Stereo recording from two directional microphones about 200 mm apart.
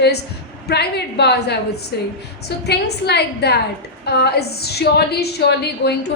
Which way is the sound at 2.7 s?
55° left (ahead or behind).